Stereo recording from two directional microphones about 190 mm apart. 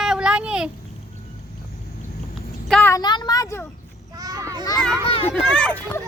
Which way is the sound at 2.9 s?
20° left (ahead or behind).